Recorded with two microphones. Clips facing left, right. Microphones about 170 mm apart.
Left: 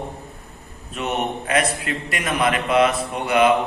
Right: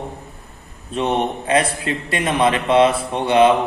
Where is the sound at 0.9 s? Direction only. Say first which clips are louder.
Right 5 dB; 30° right (ahead or behind).